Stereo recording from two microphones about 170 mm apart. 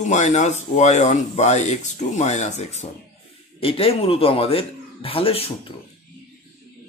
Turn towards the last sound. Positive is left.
turn(degrees=35)  # may be behind; listen again after turning